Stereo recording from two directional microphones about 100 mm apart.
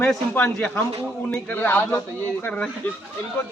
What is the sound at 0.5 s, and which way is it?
Speech, 10° left (ahead or behind).